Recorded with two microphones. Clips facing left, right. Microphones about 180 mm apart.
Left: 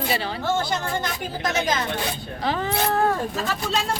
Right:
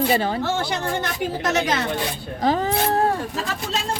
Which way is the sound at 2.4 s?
40° right (ahead or behind).